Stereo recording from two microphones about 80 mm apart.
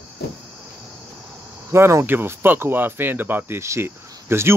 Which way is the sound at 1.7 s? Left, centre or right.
Right.